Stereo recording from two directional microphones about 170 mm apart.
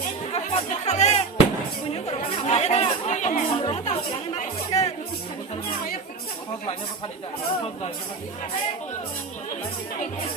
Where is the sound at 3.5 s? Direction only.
35° left (ahead or behind).